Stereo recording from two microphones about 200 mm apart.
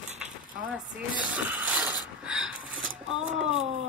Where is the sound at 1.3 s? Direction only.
5° right (ahead or behind).